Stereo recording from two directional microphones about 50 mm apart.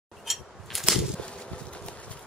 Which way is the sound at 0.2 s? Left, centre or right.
Centre.